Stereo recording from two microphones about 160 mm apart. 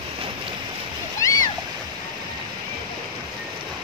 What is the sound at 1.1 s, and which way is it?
Splash, 20° left (ahead or behind).